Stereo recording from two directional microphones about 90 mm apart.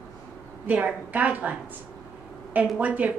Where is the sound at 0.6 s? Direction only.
15° right (ahead or behind).